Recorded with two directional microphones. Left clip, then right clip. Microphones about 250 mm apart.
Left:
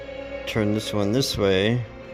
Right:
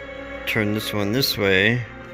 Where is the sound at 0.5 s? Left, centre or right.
Centre.